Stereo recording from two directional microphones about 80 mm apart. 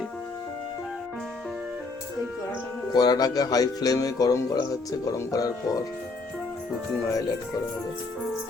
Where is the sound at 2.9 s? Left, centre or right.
Left.